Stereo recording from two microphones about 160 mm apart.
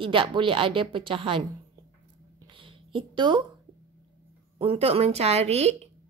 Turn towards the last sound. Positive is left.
turn(degrees=-40)  # may be behind; listen again after turning